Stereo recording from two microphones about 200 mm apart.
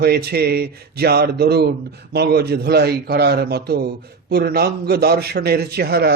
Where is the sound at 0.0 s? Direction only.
50° right (ahead or behind).